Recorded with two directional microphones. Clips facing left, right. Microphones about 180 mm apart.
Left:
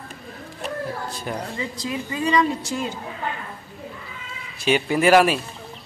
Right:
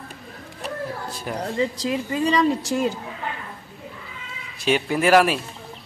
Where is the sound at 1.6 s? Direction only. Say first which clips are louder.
Right 5 dB; 35° right (ahead or behind).